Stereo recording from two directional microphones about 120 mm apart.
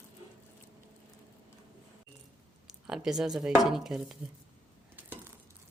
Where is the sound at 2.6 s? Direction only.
5° right (ahead or behind).